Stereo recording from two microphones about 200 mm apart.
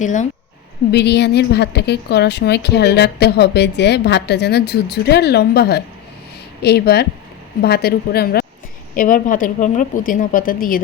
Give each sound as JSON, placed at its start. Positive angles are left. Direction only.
{"t": 0.0, "sound": "speech", "side_deg": 40}
{"t": 0.9, "sound": "a woman's voice", "side_deg": 55}